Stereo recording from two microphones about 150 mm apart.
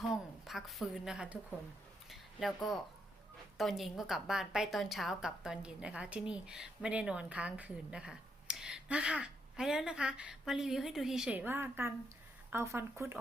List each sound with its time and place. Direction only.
0.1 s a woman's voice: centre (ahead or behind)
2.0 s a sound: centre (ahead or behind)
3.6 s a woman's voice: centre (ahead or behind); by 13.1 s 15° right (ahead or behind)